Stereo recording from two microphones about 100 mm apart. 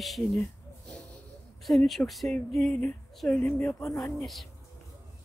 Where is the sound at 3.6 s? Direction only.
30° left (ahead or behind).